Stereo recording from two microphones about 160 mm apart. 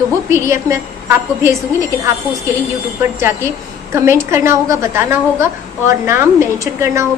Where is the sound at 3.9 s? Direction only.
15° right (ahead or behind).